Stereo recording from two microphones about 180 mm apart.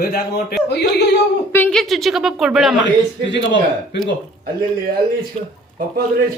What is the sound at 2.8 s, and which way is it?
Speech, 80° left.